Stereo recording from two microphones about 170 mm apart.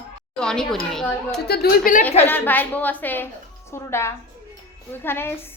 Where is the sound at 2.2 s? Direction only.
10° left (ahead or behind).